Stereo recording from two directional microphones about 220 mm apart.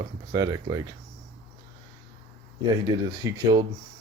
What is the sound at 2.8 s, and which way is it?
Speech, 15° right (ahead or behind).